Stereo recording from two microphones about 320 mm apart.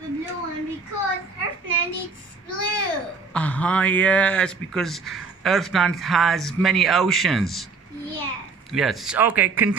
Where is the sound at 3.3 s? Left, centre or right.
Centre.